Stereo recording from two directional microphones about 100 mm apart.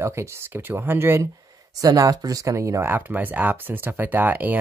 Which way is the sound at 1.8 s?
35° right (ahead or behind).